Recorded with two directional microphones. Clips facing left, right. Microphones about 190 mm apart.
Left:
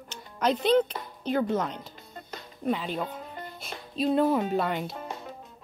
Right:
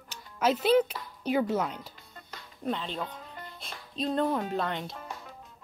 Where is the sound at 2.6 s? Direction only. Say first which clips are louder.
Left 4 dB; 5° left (ahead or behind).